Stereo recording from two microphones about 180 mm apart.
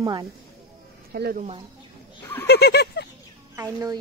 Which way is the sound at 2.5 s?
65° left (ahead or behind).